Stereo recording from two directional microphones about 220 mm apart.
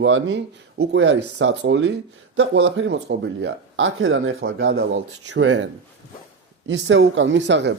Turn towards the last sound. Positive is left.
turn(degrees=-55)  # may be behind; listen again after turning